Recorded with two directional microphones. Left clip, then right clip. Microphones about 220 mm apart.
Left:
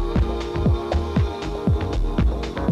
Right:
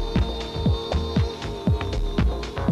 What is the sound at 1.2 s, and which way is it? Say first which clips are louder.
Music: left 3 dB; 25° right (ahead or behind).